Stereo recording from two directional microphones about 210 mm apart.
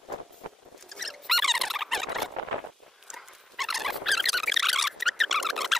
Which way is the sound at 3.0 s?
Centre (ahead or behind).